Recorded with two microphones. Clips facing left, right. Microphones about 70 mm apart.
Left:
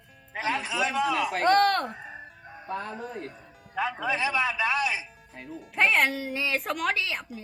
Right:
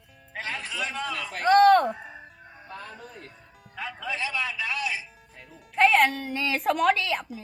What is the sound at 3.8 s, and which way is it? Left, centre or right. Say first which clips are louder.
A man's voice: left 5 dB; centre.